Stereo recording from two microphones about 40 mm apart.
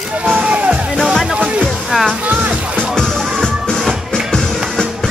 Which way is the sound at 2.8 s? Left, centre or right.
Centre.